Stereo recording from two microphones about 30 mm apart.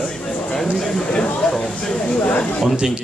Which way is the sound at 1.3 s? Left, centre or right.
Left.